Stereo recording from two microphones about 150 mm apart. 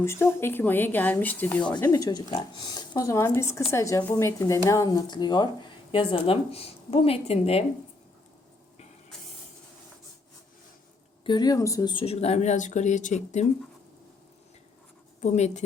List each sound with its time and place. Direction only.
0.0 s speech: 15° left (ahead or behind)
1.9 s speech: 25° left (ahead or behind)
11.2 s speech: 30° left (ahead or behind)
12.0 s speech: 45° left (ahead or behind)
15.2 s speech: 50° left (ahead or behind)